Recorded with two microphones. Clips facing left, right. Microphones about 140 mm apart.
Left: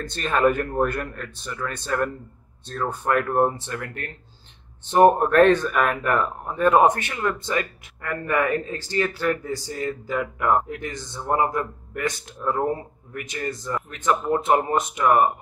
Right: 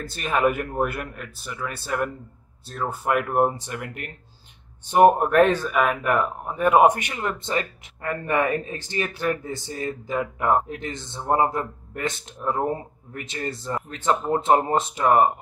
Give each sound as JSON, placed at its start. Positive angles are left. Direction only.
{"t": 0.0, "sound": "a man's voice", "side_deg": -5}